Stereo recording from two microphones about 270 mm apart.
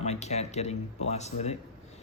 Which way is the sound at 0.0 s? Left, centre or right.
Left.